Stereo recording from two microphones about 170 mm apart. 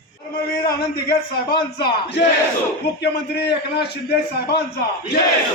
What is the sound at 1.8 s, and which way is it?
Speech, 75° left (ahead or behind).